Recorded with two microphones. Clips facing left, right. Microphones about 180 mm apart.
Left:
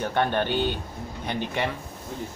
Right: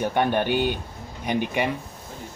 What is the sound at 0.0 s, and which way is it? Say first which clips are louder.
Speech: right 2 dB; 15° right (ahead or behind).